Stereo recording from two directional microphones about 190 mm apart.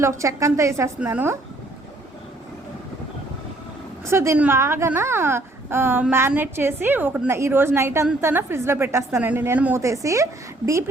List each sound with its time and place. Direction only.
0.0 s a woman's voice: 15° right (ahead or behind)
4.0 s a woman's voice: 15° right (ahead or behind)